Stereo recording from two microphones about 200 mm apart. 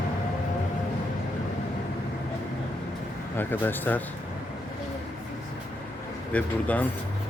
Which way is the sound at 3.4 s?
10° left (ahead or behind).